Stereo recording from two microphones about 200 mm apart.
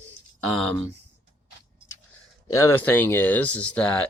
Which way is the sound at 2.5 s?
15° left (ahead or behind).